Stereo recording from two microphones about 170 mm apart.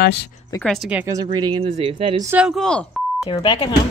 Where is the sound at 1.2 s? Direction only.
25° right (ahead or behind).